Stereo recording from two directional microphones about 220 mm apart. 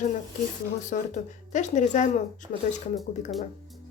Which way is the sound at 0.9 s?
35° left (ahead or behind).